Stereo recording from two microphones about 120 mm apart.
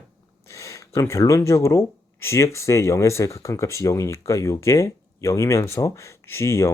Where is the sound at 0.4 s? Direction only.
25° left (ahead or behind).